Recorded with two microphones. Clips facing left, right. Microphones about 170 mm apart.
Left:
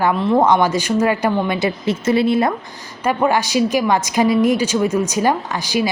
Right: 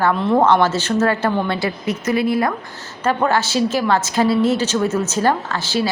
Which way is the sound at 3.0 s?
10° left (ahead or behind).